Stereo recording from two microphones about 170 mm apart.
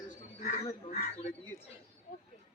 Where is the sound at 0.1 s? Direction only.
45° left (ahead or behind).